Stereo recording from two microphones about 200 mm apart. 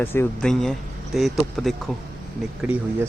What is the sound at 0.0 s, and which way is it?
Speech, 10° left (ahead or behind).